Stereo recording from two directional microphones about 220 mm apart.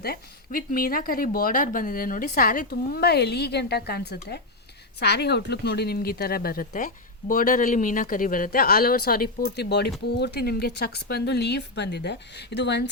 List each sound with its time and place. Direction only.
0.0 s speech: 40° left (ahead or behind)